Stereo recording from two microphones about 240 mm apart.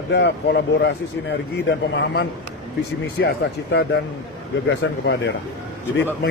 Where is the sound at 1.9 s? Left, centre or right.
Left.